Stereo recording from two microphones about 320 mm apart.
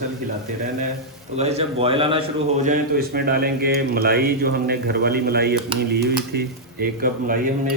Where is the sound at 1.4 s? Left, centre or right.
Centre.